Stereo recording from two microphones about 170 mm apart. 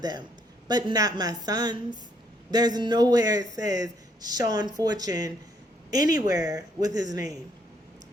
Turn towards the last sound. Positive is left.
turn(degrees=-20)  # may be behind; listen again after turning